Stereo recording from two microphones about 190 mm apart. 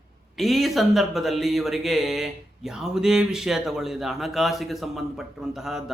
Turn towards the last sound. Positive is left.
turn(degrees=0)  # may be behind; listen again after turning